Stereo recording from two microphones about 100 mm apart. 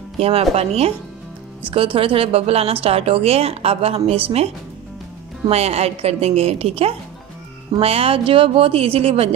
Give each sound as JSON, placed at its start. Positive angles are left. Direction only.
{"t": 0.2, "sound": "a woman's voice", "side_deg": -90}
{"t": 1.7, "sound": "speech", "side_deg": -60}
{"t": 5.5, "sound": "a woman's voice", "side_deg": -90}